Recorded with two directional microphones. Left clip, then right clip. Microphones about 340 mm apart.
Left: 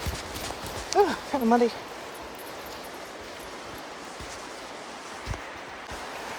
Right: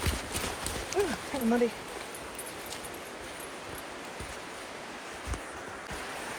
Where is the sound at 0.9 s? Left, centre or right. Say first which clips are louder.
Left 9 dB; centre.